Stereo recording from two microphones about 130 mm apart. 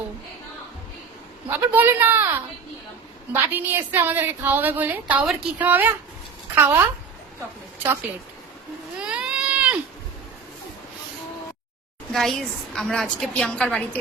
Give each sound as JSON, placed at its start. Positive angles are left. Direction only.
{"t": 1.5, "sound": "a woman's voice", "side_deg": -15}
{"t": 9.0, "sound": "a sound", "side_deg": -5}
{"t": 12.1, "sound": "a woman's voice", "side_deg": 5}